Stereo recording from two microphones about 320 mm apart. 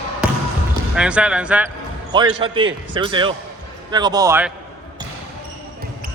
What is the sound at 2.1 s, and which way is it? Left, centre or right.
A man's voice, centre.